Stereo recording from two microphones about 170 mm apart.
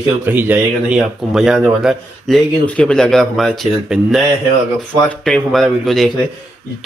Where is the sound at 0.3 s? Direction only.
10° right (ahead or behind).